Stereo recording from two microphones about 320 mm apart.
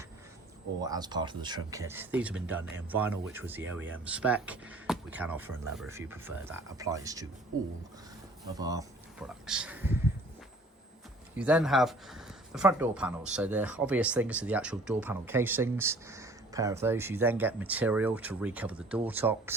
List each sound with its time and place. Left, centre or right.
0.8 s speech: centre
8.5 s speech: centre
11.3 s speech: centre